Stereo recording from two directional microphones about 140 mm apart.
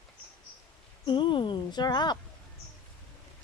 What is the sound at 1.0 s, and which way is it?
Speech, 35° left (ahead or behind).